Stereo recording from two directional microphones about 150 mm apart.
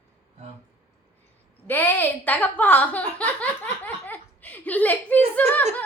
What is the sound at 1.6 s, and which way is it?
A woman's voice, 15° left (ahead or behind).